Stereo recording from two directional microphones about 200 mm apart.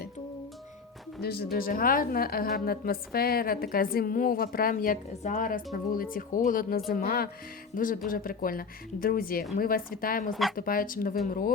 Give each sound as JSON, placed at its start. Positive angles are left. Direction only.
{"t": 1.2, "sound": "a woman's voice", "side_deg": 50}